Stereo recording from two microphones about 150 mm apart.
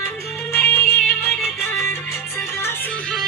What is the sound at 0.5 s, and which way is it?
Music, 15° left (ahead or behind).